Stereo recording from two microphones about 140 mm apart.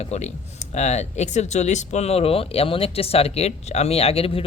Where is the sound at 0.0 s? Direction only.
50° left (ahead or behind).